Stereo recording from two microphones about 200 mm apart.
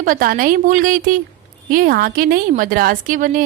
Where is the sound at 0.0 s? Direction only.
45° right (ahead or behind).